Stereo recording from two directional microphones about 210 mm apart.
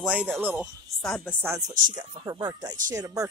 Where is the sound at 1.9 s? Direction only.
20° right (ahead or behind).